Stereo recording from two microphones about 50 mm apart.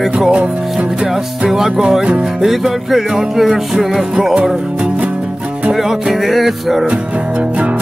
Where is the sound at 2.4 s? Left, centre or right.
Centre.